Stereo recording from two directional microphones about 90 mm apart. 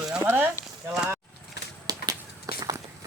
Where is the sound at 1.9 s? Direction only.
45° right (ahead or behind).